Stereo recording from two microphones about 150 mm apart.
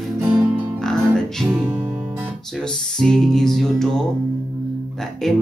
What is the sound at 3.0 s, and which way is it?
Speech, 5° left (ahead or behind).